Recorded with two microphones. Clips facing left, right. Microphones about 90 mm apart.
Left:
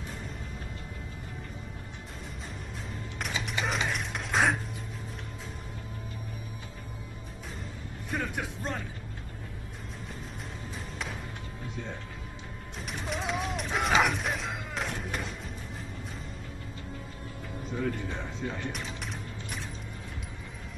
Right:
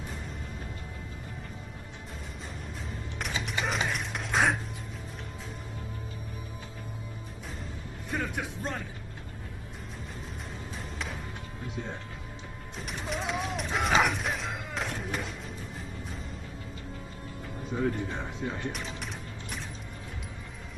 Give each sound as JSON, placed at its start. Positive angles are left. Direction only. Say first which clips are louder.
{"t": 3.2, "sound": "a sound", "louder": "even", "side_deg": 0}
{"t": 8.1, "sound": "music", "louder": "even", "side_deg": 0}
{"t": 12.8, "sound": "music", "louder": "even", "side_deg": 0}
{"t": 17.7, "sound": "music", "louder": "right 3 dB", "side_deg": -25}
{"t": 18.7, "sound": "music", "louder": "right 1 dB", "side_deg": 0}